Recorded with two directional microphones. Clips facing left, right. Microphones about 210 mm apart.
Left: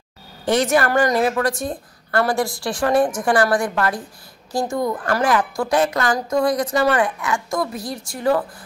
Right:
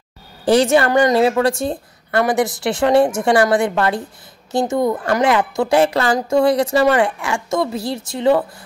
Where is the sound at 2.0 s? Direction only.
15° right (ahead or behind).